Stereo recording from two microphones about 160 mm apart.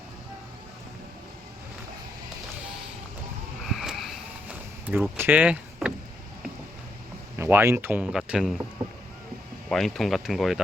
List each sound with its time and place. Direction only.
3.7 s a sound: centre (ahead or behind)
4.9 s speech: 10° right (ahead or behind)
7.3 s speech: 15° right (ahead or behind)
9.6 s speech: centre (ahead or behind)